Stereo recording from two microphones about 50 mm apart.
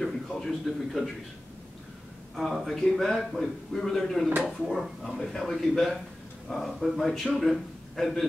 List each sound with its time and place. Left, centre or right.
0.0 s a man's voice: centre
2.3 s a man's voice: centre